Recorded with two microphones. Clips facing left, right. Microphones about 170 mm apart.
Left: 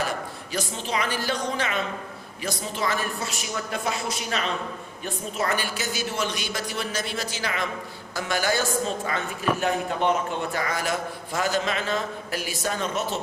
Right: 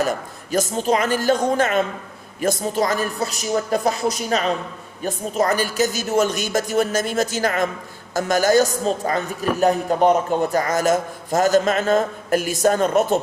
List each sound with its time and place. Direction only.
0.0 s a woman's voice: 45° right (ahead or behind)